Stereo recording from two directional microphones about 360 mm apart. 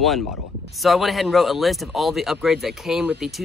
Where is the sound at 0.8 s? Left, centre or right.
Centre.